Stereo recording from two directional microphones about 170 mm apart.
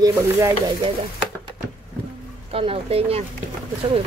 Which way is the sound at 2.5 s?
35° right (ahead or behind).